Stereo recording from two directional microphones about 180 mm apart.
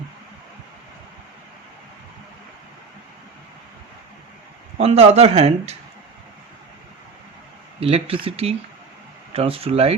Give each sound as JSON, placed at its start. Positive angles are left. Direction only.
{"t": 4.8, "sound": "speech", "side_deg": -35}
{"t": 7.8, "sound": "speech", "side_deg": -35}